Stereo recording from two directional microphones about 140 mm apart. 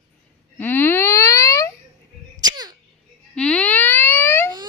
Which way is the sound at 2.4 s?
30° right (ahead or behind).